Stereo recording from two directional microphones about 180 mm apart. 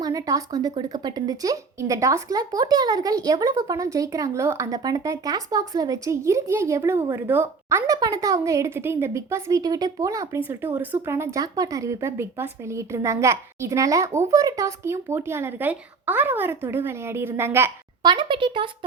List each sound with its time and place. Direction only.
0.0 s speech: 20° right (ahead or behind)
18.1 s a child's voice: 25° right (ahead or behind)